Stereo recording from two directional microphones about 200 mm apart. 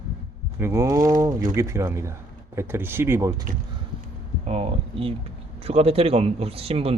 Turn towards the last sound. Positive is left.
turn(degrees=-30)  # may be behind; listen again after turning